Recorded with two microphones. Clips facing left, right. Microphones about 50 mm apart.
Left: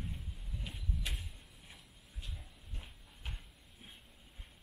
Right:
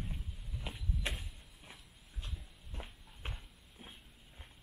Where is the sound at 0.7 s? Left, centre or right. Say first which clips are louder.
Right 3 dB; right.